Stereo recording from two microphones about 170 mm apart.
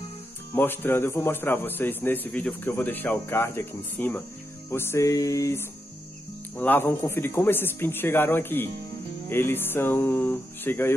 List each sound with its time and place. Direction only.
0.6 s a man's voice: 10° left (ahead or behind)